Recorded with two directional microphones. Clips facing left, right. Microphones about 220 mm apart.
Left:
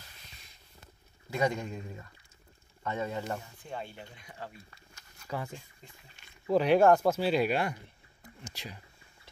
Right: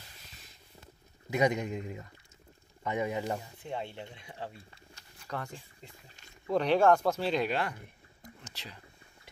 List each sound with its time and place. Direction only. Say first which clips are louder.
1.3 s speech: right 2 dB; 20° right (ahead or behind)
3.6 s speech: right 3 dB; 25° right (ahead or behind)
6.4 s speech: left 2 dB; 5° left (ahead or behind)